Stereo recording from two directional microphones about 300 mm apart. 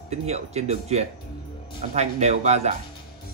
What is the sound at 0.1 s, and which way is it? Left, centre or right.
Speech, right.